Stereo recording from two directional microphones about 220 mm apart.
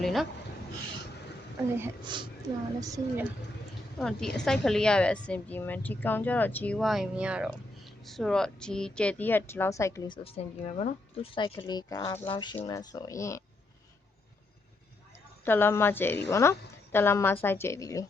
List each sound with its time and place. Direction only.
0.0 s speech: centre (ahead or behind)
2.0 s a woman's voice: 20° right (ahead or behind)
3.9 s a woman's voice: centre (ahead or behind)
15.4 s speech: 10° left (ahead or behind)